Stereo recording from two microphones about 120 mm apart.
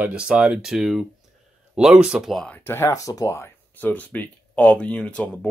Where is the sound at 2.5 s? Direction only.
20° left (ahead or behind).